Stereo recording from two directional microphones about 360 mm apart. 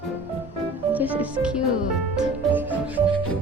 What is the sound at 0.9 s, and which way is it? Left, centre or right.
Music, centre.